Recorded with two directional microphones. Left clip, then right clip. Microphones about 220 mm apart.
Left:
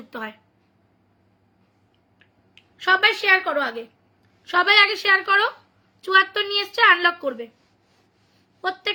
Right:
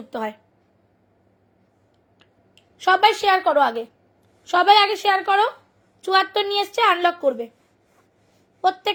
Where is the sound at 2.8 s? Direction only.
20° right (ahead or behind).